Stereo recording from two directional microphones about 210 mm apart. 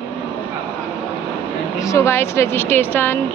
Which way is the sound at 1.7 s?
15° left (ahead or behind).